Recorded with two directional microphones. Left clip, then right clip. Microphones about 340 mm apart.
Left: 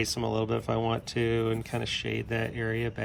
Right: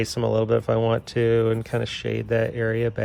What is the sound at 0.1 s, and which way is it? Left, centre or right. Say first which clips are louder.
Speech: right 8 dB; centre.